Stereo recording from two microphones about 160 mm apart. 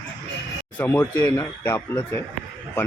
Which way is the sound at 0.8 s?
10° left (ahead or behind).